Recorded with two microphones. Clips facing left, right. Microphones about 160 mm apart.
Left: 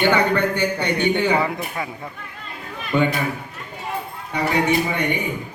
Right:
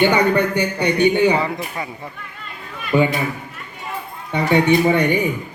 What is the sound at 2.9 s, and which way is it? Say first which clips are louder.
Speech: right 3 dB; 5° right (ahead or behind).